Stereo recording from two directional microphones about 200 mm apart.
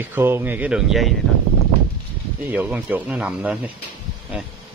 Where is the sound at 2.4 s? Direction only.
10° right (ahead or behind).